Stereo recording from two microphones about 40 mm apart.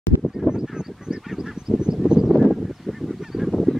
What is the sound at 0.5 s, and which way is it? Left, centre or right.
Honk, centre.